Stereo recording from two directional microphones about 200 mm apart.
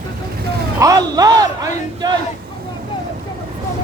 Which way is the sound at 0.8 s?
20° right (ahead or behind).